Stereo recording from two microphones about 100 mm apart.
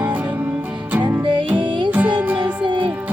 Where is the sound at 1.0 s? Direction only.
55° right (ahead or behind).